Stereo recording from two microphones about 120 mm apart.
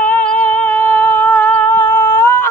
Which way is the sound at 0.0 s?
10° left (ahead or behind).